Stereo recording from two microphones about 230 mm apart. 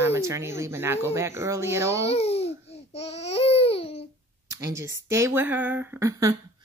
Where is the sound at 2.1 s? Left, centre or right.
Left.